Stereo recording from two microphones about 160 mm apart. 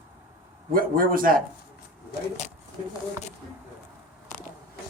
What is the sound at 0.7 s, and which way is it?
Speech, 60° right (ahead or behind).